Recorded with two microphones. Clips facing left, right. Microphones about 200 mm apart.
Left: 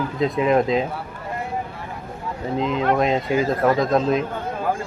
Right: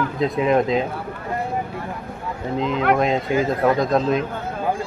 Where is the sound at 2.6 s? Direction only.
Centre (ahead or behind).